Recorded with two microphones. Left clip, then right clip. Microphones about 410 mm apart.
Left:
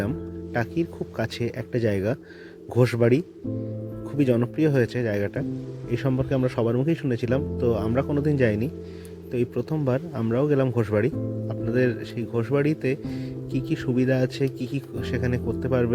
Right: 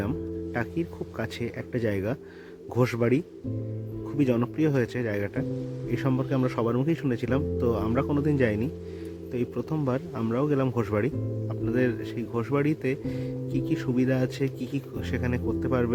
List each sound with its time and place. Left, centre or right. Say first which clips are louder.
0.5 s speech: left 7 dB; centre